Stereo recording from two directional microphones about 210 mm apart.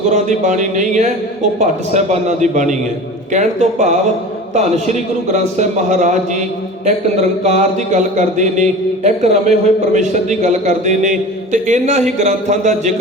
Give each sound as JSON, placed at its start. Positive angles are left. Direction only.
{"t": 0.1, "sound": "speech", "side_deg": -35}